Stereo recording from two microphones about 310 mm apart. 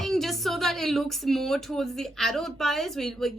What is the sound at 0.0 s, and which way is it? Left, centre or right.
Speech, centre.